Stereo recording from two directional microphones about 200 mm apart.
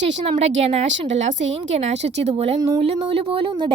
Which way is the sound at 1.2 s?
70° right (ahead or behind).